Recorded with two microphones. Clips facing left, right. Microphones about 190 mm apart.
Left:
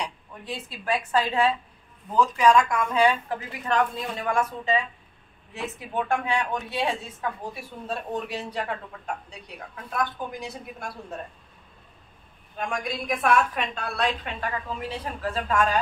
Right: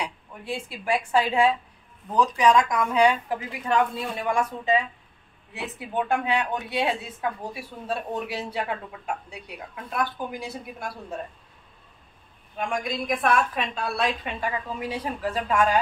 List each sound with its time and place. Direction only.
0.0 s a woman's voice: 10° right (ahead or behind)
12.5 s a woman's voice: centre (ahead or behind)